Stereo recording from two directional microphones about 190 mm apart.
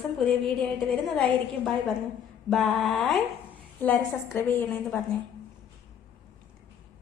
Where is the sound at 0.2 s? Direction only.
5° left (ahead or behind).